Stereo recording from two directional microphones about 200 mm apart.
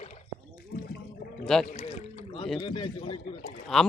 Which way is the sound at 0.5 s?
50° left (ahead or behind).